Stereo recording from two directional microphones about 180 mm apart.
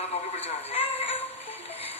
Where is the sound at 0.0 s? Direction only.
35° left (ahead or behind).